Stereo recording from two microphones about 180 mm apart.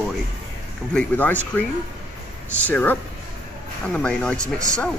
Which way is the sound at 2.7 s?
10° left (ahead or behind).